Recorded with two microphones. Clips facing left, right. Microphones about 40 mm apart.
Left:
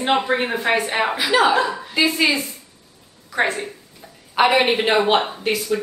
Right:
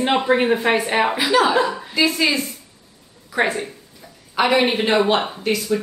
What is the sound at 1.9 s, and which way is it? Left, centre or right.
Speech, left.